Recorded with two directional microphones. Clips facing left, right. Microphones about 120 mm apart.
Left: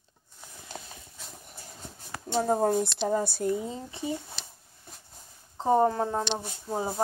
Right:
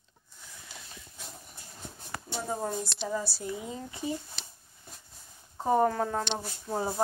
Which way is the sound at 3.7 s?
25° left (ahead or behind).